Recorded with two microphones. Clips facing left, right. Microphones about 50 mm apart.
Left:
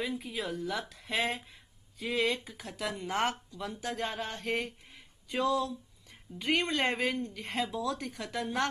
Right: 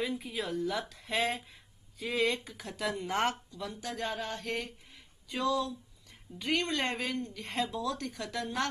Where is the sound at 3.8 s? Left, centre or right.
Centre.